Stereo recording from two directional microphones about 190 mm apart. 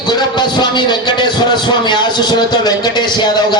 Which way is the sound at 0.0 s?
20° left (ahead or behind).